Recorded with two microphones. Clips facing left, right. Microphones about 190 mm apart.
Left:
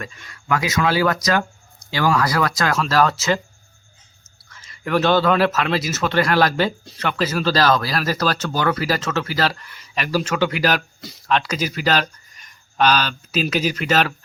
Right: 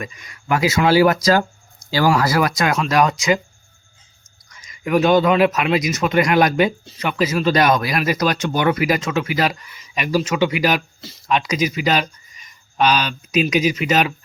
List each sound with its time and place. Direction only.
0.0 s speech: 15° right (ahead or behind)
0.4 s speech: 25° right (ahead or behind)
4.4 s speech: 15° right (ahead or behind)